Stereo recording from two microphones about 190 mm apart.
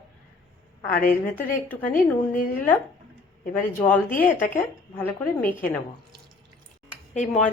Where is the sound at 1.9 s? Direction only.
45° left (ahead or behind).